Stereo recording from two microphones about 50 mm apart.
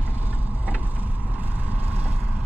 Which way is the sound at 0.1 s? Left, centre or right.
Right.